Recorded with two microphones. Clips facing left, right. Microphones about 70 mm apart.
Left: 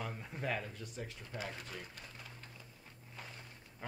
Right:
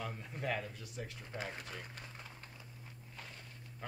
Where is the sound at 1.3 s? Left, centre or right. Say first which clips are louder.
Right 1 dB; right.